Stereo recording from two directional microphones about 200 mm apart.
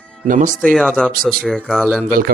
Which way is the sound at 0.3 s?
40° right (ahead or behind).